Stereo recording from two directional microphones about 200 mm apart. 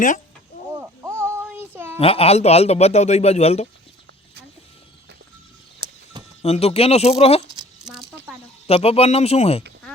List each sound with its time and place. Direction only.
0.5 s a sound: 35° left (ahead or behind)
1.0 s music: 10° right (ahead or behind)
2.0 s a man's voice: 30° left (ahead or behind)
5.8 s a sound: 25° right (ahead or behind)
6.4 s a man's voice: 30° left (ahead or behind)
7.6 s rattle: 5° right (ahead or behind)
8.6 s a man's voice: 30° left (ahead or behind)